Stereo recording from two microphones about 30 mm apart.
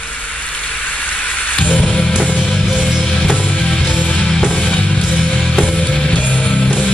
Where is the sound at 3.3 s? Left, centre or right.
Left.